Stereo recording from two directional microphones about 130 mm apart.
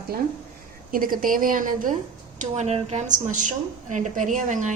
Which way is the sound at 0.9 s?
90° right.